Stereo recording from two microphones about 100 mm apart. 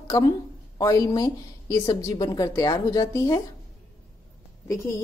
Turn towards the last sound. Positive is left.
turn(degrees=30)  # may be behind; listen again after turning